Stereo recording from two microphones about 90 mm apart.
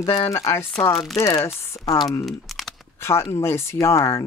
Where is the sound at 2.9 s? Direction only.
30° left (ahead or behind).